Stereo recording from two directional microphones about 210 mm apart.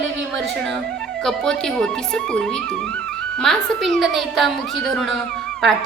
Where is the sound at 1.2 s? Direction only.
Centre (ahead or behind).